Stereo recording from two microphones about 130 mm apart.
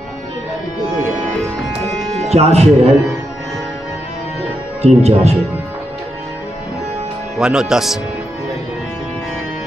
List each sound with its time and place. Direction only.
2.2 s speech: 55° right (ahead or behind)
4.8 s speech: 55° right (ahead or behind)
7.3 s speech: 5° right (ahead or behind)